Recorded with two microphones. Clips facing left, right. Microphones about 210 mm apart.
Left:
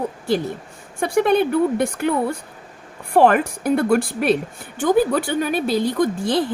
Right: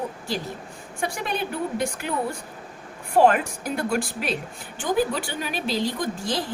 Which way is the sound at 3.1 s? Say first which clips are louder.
Left 3 dB; 60° left (ahead or behind).